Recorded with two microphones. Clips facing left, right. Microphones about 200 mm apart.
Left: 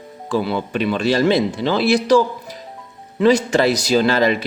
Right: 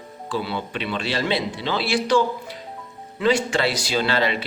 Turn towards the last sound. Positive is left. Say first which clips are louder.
# left 6 dB
turn(degrees=45)  # may be behind; listen again after turning